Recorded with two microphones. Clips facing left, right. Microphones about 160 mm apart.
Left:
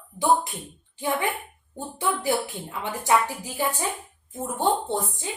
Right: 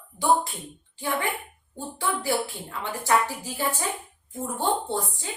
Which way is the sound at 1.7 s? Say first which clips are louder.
Left 2 dB; 20° left (ahead or behind).